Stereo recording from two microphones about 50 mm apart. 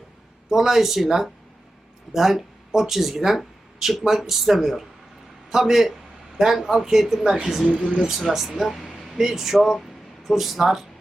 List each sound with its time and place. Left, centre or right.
0.5 s a man's voice: centre
7.7 s speech: right
8.3 s speech: centre